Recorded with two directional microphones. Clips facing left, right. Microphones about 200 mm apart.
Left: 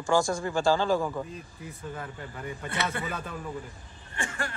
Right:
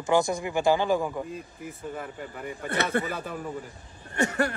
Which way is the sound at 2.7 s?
55° right (ahead or behind).